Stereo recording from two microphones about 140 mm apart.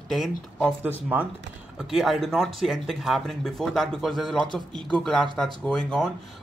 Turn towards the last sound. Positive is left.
turn(degrees=5)  # may be behind; listen again after turning